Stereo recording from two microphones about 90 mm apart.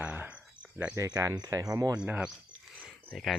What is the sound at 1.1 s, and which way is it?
Speech, 45° right (ahead or behind).